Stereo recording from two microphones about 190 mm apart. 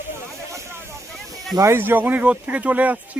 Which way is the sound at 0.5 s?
15° right (ahead or behind).